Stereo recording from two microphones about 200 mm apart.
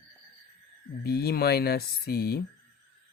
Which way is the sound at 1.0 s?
50° left (ahead or behind).